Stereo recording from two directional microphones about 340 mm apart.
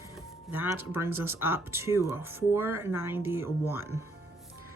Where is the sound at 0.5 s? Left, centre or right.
Centre.